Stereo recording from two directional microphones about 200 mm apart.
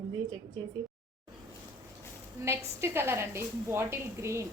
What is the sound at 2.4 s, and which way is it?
A woman's voice, 10° right (ahead or behind).